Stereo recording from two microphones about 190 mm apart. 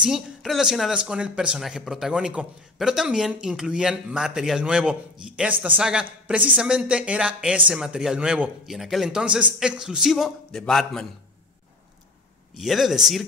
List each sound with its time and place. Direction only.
0.0 s speech: centre (ahead or behind)
12.5 s speech: centre (ahead or behind)